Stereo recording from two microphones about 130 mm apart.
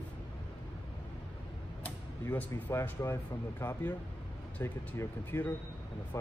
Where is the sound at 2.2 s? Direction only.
20° left (ahead or behind).